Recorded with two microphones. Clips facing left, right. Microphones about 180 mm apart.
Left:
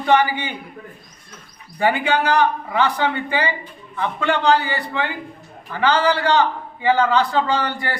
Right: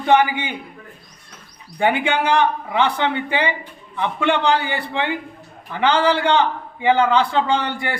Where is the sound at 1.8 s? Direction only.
20° right (ahead or behind).